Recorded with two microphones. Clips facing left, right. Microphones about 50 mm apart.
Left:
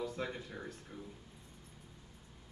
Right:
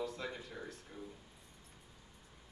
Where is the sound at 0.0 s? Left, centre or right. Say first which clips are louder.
Left 2 dB; left.